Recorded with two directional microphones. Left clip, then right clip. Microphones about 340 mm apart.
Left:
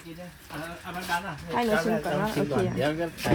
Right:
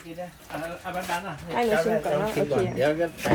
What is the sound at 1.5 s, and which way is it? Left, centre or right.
Speech, centre.